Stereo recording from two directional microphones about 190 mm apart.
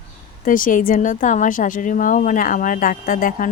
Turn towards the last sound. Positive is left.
turn(degrees=45)  # may be behind; listen again after turning